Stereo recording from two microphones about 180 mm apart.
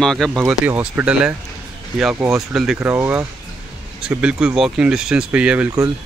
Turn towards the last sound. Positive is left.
turn(degrees=-5)  # may be behind; listen again after turning